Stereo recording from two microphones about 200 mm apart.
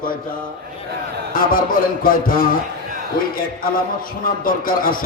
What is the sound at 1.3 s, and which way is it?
A man's voice, 45° left (ahead or behind).